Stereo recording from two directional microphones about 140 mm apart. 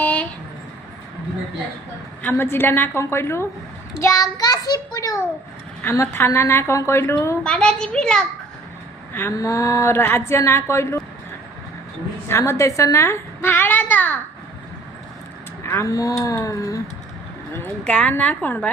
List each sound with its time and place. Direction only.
0.0 s a sound: 10° left (ahead or behind)
2.2 s a woman's voice: 15° left (ahead or behind)
7.4 s a child's voice: 5° left (ahead or behind)
9.1 s a woman's voice: 20° left (ahead or behind)
12.3 s a woman's voice: 20° left (ahead or behind)
15.6 s a woman's voice: 20° left (ahead or behind)
17.5 s a woman's voice: 10° left (ahead or behind)